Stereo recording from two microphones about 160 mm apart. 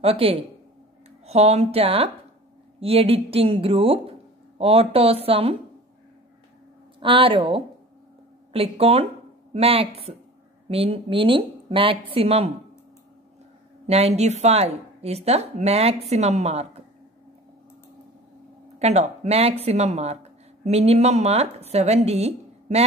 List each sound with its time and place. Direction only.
0.0 s speech: 35° right (ahead or behind)
7.0 s speech: 35° right (ahead or behind)
13.8 s a woman's voice: 40° right (ahead or behind)
18.8 s a woman's voice: 45° right (ahead or behind)